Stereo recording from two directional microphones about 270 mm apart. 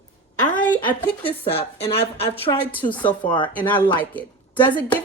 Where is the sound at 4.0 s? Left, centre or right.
Centre.